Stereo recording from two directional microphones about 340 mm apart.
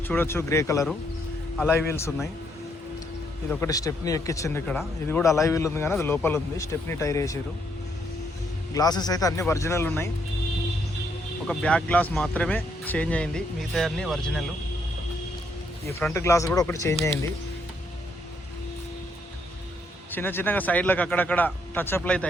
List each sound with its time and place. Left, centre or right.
0.1 s speech: centre
3.5 s speech: centre
8.7 s speech: centre
11.4 s speech: centre
16.0 s speech: centre
20.1 s speech: centre